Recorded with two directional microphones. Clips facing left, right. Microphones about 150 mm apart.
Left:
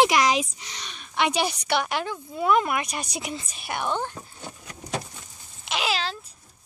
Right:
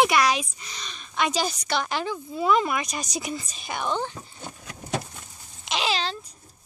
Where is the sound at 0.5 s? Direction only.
75° left (ahead or behind).